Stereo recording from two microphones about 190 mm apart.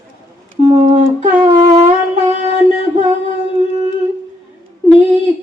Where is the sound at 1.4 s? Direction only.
20° right (ahead or behind).